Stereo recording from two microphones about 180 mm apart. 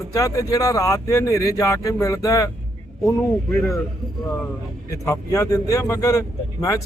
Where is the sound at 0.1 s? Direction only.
20° left (ahead or behind).